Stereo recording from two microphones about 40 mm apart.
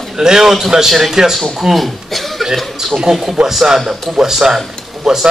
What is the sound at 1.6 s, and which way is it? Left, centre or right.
Speech, centre.